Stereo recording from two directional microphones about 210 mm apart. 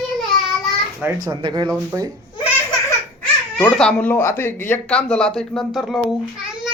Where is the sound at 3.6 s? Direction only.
5° left (ahead or behind).